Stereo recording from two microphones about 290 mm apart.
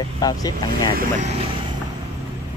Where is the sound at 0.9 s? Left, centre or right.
Right.